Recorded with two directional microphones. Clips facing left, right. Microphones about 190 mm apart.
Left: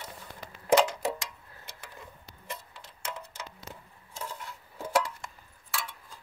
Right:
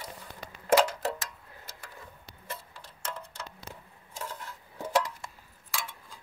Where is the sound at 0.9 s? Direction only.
15° left (ahead or behind).